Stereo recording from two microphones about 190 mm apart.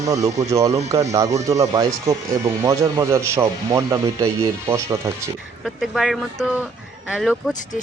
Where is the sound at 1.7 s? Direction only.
20° right (ahead or behind).